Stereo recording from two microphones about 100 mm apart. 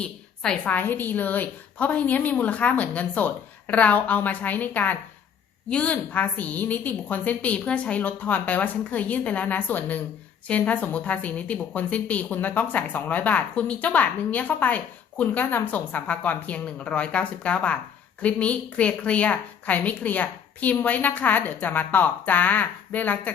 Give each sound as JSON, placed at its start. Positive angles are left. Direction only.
{"t": 0.0, "sound": "a woman's voice", "side_deg": 10}